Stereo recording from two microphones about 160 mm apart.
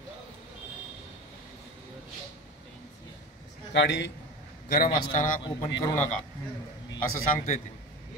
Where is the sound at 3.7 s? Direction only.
90° left.